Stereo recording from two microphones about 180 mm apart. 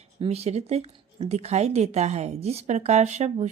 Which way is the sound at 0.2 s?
35° right (ahead or behind).